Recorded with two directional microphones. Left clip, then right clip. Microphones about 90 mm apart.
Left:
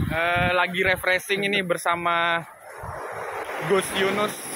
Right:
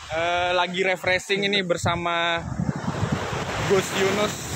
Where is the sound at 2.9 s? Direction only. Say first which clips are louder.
Right 1 dB; centre (ahead or behind).